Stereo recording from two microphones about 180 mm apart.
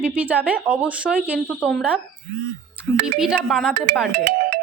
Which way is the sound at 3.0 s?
5° right (ahead or behind).